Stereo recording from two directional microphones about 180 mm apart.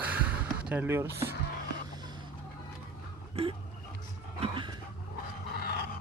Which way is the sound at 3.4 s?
35° right (ahead or behind).